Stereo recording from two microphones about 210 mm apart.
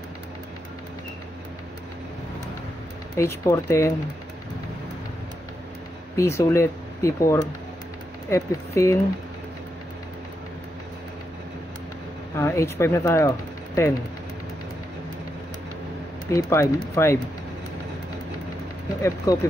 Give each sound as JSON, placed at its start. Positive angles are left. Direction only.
{"t": 3.2, "sound": "speech", "side_deg": 15}
{"t": 6.1, "sound": "speech", "side_deg": 15}
{"t": 12.4, "sound": "speech", "side_deg": 15}
{"t": 16.3, "sound": "speech", "side_deg": 15}
{"t": 19.3, "sound": "speech", "side_deg": 15}